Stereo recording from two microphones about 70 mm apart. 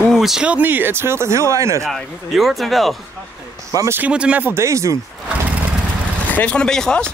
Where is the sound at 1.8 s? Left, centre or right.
Centre.